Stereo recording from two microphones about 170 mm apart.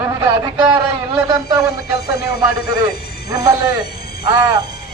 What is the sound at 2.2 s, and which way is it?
Speech, 70° left (ahead or behind).